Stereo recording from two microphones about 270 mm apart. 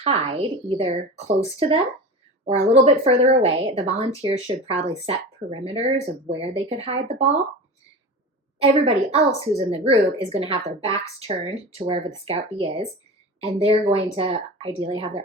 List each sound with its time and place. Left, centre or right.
0.0 s speech: right
2.8 s speech: right
8.6 s speech: right